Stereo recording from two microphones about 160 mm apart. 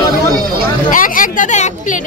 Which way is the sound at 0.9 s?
60° left (ahead or behind).